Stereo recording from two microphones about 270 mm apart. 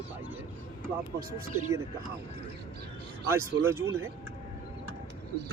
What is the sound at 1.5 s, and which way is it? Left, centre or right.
Speech, right.